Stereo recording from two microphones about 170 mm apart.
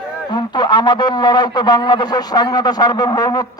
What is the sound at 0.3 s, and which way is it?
A man's voice, 25° left (ahead or behind).